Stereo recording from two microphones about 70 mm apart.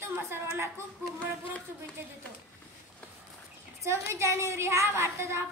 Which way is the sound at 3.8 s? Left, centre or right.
Right.